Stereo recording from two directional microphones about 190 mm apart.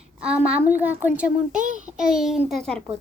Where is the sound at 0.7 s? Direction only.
10° right (ahead or behind).